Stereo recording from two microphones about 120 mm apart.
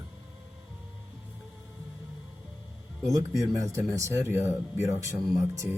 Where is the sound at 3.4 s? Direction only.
25° right (ahead or behind).